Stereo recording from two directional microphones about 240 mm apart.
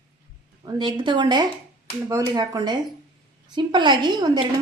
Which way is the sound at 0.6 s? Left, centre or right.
Centre.